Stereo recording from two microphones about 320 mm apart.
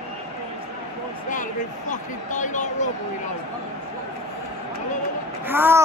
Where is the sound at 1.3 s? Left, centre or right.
Left.